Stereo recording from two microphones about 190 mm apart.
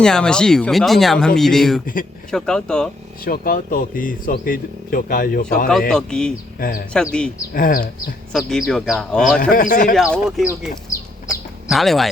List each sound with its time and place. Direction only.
0.0 s speech: 5° left (ahead or behind)
3.2 s speech: 50° left (ahead or behind)
5.9 s speech: 5° left (ahead or behind)
6.6 s speech: 45° left (ahead or behind)
6.9 s speech: 5° left (ahead or behind)
7.5 s speech: 45° left (ahead or behind)
8.3 s speech: centre (ahead or behind)
9.4 s speech: 45° left (ahead or behind)
9.9 s speech: centre (ahead or behind)
11.7 s speech: centre (ahead or behind)